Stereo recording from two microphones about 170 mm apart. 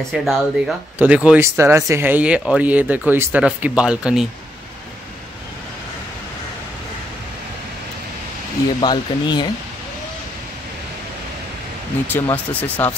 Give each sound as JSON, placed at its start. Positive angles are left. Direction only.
{"t": 0.1, "sound": "speech", "side_deg": 0}
{"t": 8.8, "sound": "speech", "side_deg": 25}
{"t": 12.1, "sound": "speech", "side_deg": 10}